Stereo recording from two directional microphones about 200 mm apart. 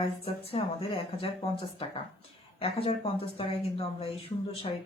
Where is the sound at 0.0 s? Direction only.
30° left (ahead or behind).